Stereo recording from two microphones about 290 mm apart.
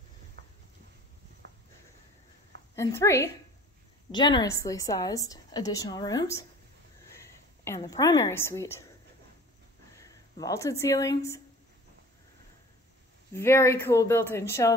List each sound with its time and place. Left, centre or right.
0.4 s a sound: right
2.7 s a woman's voice: centre
7.6 s a woman's voice: centre
9.9 s speech: centre
13.3 s a woman's voice: centre